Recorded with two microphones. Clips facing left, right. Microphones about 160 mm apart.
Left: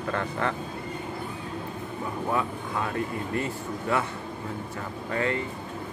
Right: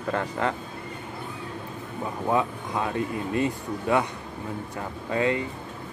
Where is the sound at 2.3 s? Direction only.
20° right (ahead or behind).